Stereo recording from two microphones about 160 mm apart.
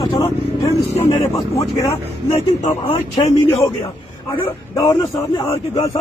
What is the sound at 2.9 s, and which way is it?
Speech, 30° left (ahead or behind).